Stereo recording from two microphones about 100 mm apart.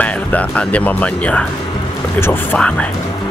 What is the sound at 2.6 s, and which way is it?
Speech, 10° left (ahead or behind).